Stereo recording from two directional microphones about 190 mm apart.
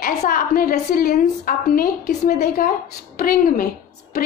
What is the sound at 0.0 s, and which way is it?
A woman's voice, 45° left (ahead or behind).